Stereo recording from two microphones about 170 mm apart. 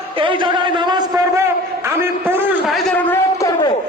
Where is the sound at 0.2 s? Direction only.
30° right (ahead or behind); by 2.4 s 15° right (ahead or behind).